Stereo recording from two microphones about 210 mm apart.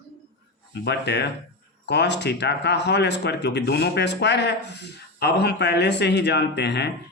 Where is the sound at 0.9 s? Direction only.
55° left (ahead or behind).